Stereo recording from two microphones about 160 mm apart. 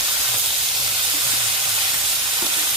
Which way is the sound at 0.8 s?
25° right (ahead or behind).